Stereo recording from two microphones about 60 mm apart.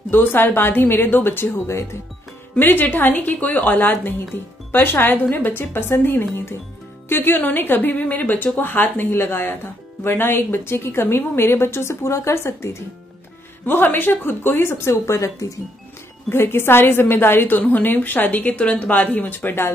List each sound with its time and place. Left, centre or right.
0.1 s a woman's voice: left
2.6 s a woman's voice: left
13.7 s a woman's voice: left
15.1 s speech: left
16.3 s a woman's voice: left